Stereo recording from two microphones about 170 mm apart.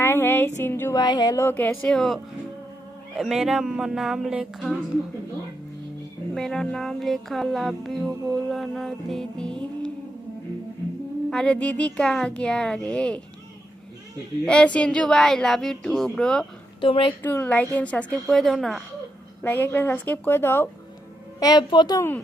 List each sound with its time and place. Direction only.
0.0 s music: 15° left (ahead or behind); by 4.8 s 5° right (ahead or behind)
6.3 s music: centre (ahead or behind)
11.3 s music: 5° left (ahead or behind)
14.4 s music: 5° left (ahead or behind)
16.8 s a woman's voice: 30° left (ahead or behind)
17.1 s music: 10° left (ahead or behind)
19.4 s music: 10° left (ahead or behind)
21.4 s a woman's voice: 25° left (ahead or behind)